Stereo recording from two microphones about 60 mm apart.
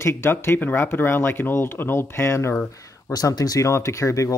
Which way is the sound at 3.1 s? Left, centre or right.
Left.